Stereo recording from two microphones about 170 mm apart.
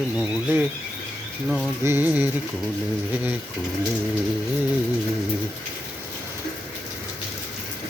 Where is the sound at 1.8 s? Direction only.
15° right (ahead or behind).